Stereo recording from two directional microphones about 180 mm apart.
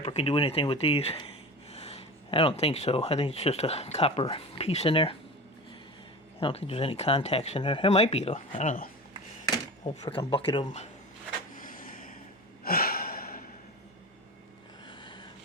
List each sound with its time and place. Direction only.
0.0 s speech: 35° left (ahead or behind)
6.4 s speech: 30° left (ahead or behind)
10.0 s speech: 25° left (ahead or behind)
11.5 s a sound: 50° left (ahead or behind)
12.6 s gasp: 55° left (ahead or behind)
14.8 s a sound: 25° left (ahead or behind)